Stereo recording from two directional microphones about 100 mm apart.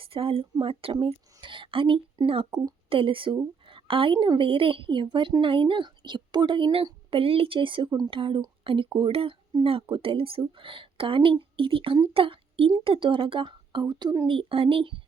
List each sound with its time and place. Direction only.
0.0 s speech: 65° right (ahead or behind)
7.1 s speech: 70° right (ahead or behind)
7.9 s a woman's voice: 40° right (ahead or behind)
8.1 s speech: 60° right (ahead or behind)
13.8 s a woman's voice: 40° right (ahead or behind)
14.3 s speech: 65° right (ahead or behind)